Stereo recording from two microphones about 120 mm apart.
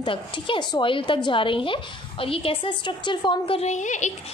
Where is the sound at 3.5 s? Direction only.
80° left.